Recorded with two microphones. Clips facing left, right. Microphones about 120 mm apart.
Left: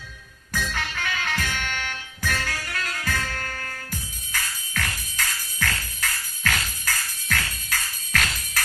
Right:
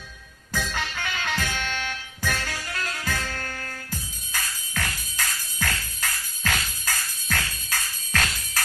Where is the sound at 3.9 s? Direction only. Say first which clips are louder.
Even; 20° right (ahead or behind).